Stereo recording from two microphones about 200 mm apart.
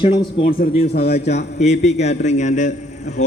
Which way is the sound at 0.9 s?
55° left (ahead or behind).